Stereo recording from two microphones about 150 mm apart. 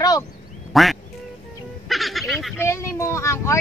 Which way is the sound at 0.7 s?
Centre (ahead or behind).